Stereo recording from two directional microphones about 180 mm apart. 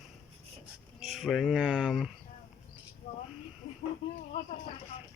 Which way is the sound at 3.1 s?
45° left (ahead or behind).